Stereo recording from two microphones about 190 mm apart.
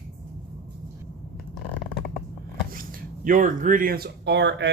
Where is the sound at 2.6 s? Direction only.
50° right (ahead or behind).